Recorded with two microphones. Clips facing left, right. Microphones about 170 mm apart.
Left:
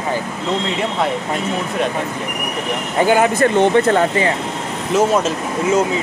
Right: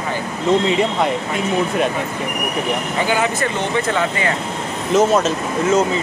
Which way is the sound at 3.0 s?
50° left (ahead or behind).